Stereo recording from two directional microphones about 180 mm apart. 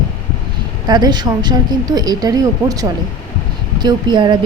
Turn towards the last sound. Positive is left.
turn(degrees=-25)  # may be behind; listen again after turning